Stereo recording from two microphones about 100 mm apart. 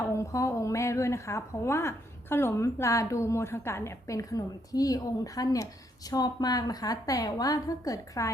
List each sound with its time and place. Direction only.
0.0 s a woman's voice: 30° left (ahead or behind)